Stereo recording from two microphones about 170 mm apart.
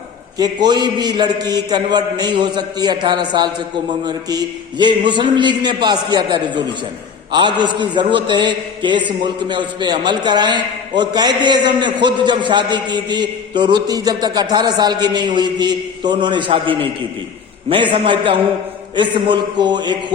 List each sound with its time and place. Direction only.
0.3 s a man's voice: 25° right (ahead or behind)